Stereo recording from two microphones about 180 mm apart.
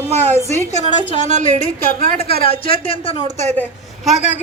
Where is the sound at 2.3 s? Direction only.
30° left (ahead or behind).